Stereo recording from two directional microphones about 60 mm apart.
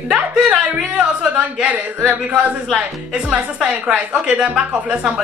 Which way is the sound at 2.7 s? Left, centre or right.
Centre.